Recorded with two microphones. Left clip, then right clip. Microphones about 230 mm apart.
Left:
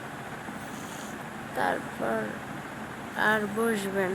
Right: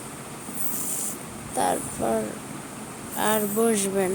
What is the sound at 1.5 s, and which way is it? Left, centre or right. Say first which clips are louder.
Speech: right 4 dB; centre.